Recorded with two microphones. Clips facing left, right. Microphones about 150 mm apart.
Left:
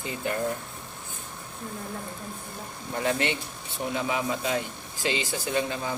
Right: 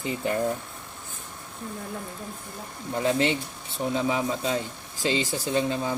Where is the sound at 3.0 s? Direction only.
25° right (ahead or behind).